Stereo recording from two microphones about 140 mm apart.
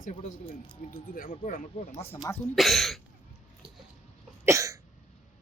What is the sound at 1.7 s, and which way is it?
Speech, 50° left (ahead or behind).